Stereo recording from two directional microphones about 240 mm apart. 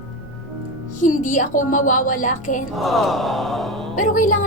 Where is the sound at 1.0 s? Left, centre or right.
Left.